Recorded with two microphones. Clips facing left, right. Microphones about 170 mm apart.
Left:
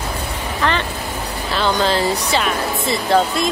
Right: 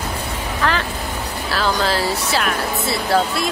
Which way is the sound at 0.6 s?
Centre (ahead or behind).